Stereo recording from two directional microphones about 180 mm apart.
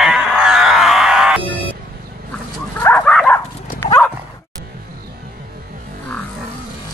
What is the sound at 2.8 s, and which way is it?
Dog, 5° left (ahead or behind).